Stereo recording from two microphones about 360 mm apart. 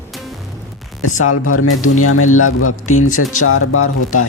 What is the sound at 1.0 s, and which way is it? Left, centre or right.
Speech, left.